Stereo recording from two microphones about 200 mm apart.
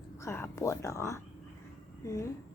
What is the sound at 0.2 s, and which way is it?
Speech, 15° left (ahead or behind).